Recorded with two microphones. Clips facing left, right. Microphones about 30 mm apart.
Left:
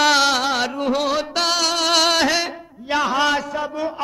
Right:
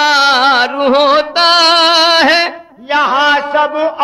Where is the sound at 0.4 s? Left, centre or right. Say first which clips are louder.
Right 11 dB; right.